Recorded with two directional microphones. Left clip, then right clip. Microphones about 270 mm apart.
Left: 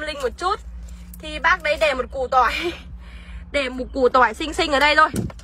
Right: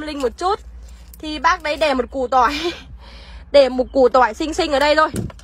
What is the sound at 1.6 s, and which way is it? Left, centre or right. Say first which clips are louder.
A woman's voice: right 1 dB; right.